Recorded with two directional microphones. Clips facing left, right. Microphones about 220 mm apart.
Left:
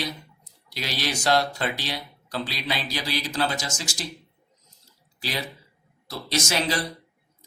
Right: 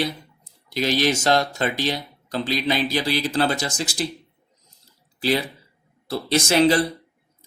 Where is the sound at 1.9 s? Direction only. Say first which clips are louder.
Right 4 dB; 20° right (ahead or behind).